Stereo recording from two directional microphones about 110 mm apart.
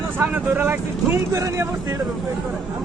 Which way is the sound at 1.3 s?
30° right (ahead or behind).